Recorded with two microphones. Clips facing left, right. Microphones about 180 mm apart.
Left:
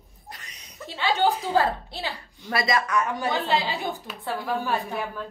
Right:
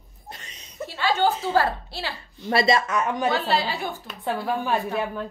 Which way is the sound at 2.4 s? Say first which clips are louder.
Right 4 dB; 25° right (ahead or behind).